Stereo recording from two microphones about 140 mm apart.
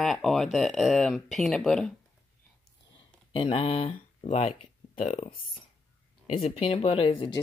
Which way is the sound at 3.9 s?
55° left (ahead or behind).